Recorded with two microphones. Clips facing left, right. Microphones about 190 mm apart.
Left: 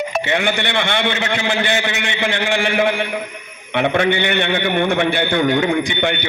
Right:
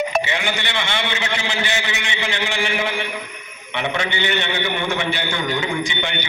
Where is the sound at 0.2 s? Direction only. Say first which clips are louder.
Left 5 dB; 55° left (ahead or behind).